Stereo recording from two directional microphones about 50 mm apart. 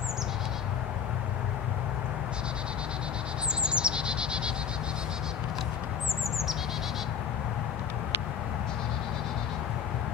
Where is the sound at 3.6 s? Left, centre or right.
Centre.